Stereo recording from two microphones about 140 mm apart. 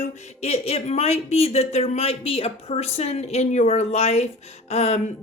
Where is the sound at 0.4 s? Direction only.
45° left (ahead or behind).